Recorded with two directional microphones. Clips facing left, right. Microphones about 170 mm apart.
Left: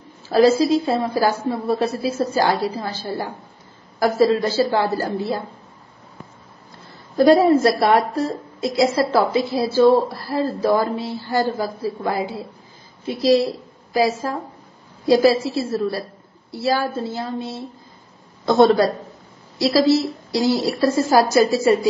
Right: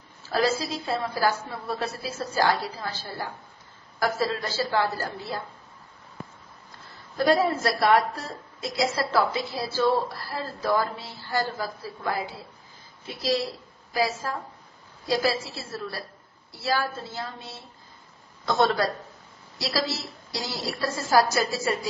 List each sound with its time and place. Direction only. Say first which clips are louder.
0.3 s a woman's voice: left 11 dB; 20° left (ahead or behind)
7.2 s a woman's voice: left 9 dB; 25° left (ahead or behind)
13.9 s a woman's voice: left 7 dB; 20° left (ahead or behind)